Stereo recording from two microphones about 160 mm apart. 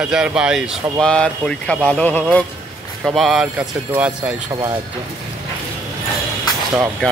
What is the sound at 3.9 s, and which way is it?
Speech, 10° right (ahead or behind).